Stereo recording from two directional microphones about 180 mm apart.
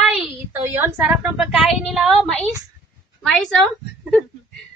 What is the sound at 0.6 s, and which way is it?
A woman's voice, 10° right (ahead or behind).